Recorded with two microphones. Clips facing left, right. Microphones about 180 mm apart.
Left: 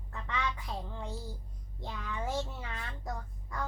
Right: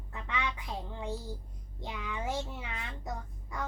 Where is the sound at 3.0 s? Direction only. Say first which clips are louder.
Even; 20° right (ahead or behind).